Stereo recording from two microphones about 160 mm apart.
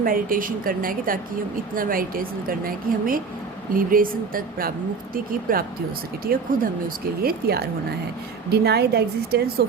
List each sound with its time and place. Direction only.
0.0 s a woman's voice: 60° right (ahead or behind)
8.4 s speech: 90° right